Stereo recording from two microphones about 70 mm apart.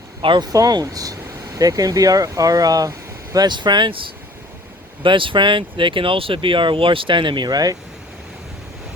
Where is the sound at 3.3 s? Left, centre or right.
Right.